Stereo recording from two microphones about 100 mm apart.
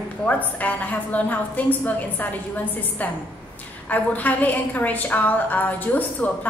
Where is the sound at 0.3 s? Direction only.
15° left (ahead or behind).